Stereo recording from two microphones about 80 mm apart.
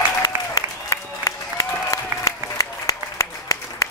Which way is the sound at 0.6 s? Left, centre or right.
Left.